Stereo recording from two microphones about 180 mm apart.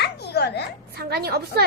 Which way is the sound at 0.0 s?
65° left (ahead or behind).